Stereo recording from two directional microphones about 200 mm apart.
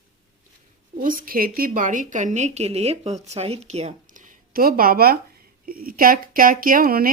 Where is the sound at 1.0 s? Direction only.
45° right (ahead or behind).